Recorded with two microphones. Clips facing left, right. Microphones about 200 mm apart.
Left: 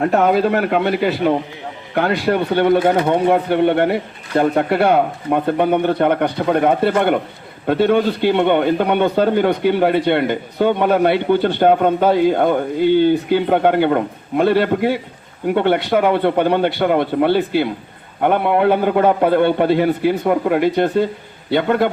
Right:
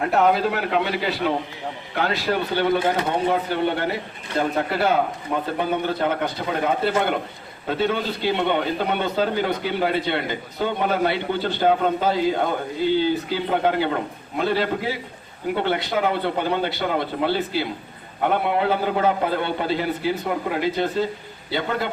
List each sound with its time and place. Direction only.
0.5 s a man's voice: 55° left (ahead or behind)